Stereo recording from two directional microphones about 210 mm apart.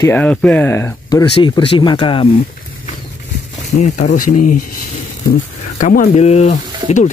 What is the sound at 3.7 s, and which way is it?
Speech, 35° left (ahead or behind).